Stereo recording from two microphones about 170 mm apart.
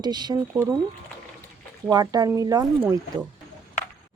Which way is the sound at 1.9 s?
25° right (ahead or behind).